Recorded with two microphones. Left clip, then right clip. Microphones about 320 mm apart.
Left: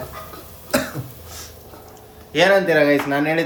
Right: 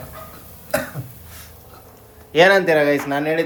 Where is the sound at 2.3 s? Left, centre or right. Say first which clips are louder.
Right 2 dB; right.